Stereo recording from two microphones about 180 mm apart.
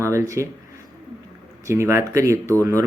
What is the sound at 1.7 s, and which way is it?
Speech, 15° right (ahead or behind).